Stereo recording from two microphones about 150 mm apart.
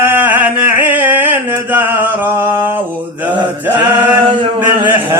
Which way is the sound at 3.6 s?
10° right (ahead or behind).